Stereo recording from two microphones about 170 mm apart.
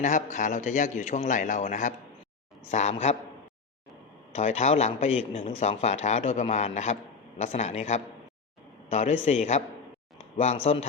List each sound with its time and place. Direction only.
0.0 s a man's voice: 45° left (ahead or behind)
4.4 s a man's voice: 40° left (ahead or behind)